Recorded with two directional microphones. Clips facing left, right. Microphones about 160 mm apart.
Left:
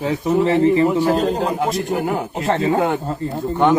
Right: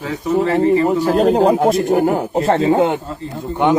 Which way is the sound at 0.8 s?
45° right (ahead or behind).